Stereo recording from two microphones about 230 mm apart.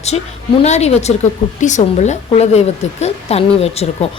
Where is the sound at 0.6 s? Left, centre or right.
Left.